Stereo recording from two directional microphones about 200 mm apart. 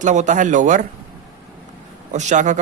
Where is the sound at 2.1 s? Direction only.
35° right (ahead or behind).